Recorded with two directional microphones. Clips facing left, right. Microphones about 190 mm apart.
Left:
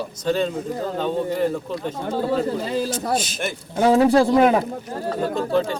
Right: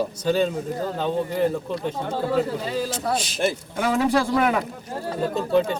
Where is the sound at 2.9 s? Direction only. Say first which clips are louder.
Left 2 dB; 30° right (ahead or behind).